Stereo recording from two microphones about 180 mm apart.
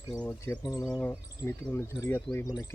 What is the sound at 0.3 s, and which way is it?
Speech, 10° left (ahead or behind).